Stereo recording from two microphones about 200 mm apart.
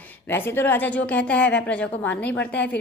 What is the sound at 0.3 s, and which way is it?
A woman's voice, 10° left (ahead or behind).